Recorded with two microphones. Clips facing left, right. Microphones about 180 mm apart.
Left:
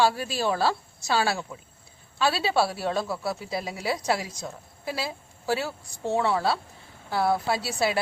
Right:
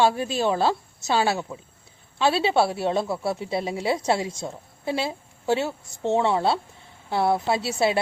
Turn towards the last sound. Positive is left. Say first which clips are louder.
# right 3 dB
turn(degrees=-25)  # may be behind; listen again after turning